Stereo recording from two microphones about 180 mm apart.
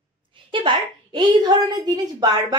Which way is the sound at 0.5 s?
25° right (ahead or behind).